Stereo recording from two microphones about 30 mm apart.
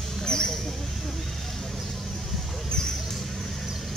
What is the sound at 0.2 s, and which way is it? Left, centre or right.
Mouse, left.